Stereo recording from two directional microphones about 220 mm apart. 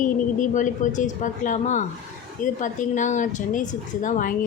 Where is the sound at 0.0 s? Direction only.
35° left (ahead or behind).